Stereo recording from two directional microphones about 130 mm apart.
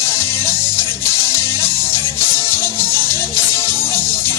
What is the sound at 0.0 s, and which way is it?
Music, 20° left (ahead or behind).